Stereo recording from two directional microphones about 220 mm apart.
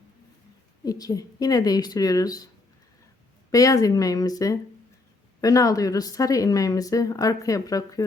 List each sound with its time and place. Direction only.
0.9 s speech: 15° left (ahead or behind)
3.5 s speech: 15° left (ahead or behind)